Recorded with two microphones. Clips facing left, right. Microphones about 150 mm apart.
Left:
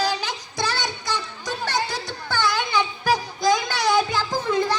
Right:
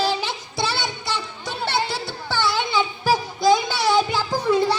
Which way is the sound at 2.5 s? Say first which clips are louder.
Right 1 dB; 25° right (ahead or behind).